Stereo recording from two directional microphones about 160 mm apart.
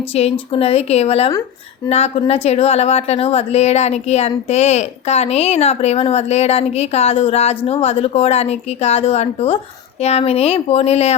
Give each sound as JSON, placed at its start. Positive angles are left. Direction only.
{"t": 0.1, "sound": "a woman's voice", "side_deg": 40}